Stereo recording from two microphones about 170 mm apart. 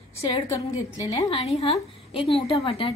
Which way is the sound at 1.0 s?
20° left (ahead or behind).